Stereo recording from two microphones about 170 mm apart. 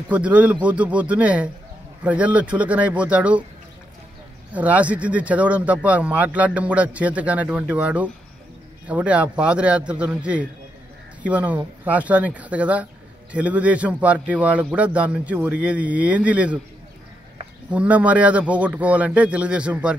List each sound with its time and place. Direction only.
0.1 s speech: 10° right (ahead or behind)
4.6 s speech: 10° right (ahead or behind)
17.6 s speech: 10° right (ahead or behind)